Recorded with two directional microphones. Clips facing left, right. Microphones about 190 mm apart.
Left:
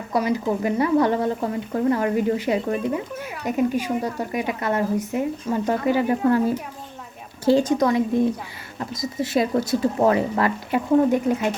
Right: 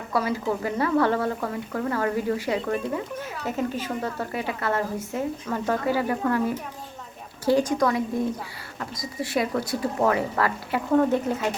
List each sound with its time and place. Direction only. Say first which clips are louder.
0.1 s speech: left 3 dB; 20° left (ahead or behind)
7.4 s speech: left 3 dB; 25° left (ahead or behind)